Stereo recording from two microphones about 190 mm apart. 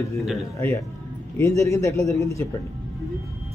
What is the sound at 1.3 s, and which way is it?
Speech, 15° left (ahead or behind).